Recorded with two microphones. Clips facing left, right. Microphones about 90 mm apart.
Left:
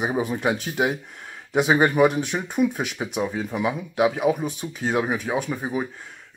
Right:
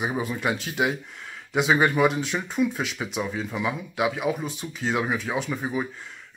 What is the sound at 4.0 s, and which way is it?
Speech, 35° left (ahead or behind).